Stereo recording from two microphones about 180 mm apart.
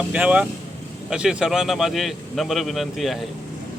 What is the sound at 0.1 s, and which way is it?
A man's voice, 5° right (ahead or behind).